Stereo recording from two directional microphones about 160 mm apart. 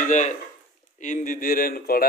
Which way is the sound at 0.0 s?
50° left (ahead or behind).